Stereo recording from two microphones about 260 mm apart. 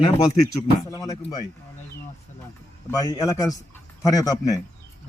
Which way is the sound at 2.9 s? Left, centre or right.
Centre.